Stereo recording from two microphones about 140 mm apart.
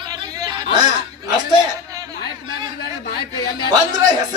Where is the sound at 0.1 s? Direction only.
25° right (ahead or behind).